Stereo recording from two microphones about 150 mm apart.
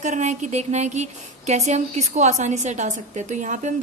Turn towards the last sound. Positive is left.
turn(degrees=-55)  # may be behind; listen again after turning